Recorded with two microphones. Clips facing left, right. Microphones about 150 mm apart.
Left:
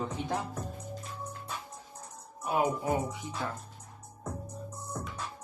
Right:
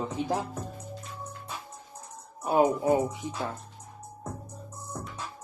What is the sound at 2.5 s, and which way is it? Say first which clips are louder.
Speech: right 6 dB; 30° right (ahead or behind).